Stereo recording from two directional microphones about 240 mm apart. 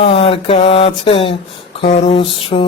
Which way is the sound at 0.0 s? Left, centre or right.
Left.